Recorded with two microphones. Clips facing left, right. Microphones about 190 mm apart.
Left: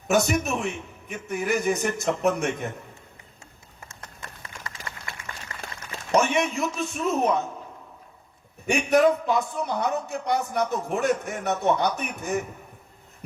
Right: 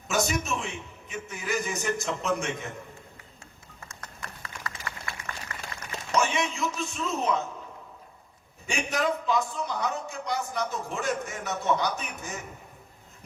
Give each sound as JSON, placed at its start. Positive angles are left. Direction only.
{"t": 0.1, "sound": "a man's voice", "side_deg": 55}
{"t": 3.8, "sound": "horse", "side_deg": 25}
{"t": 6.1, "sound": "a man's voice", "side_deg": 60}
{"t": 8.6, "sound": "a man's voice", "side_deg": 60}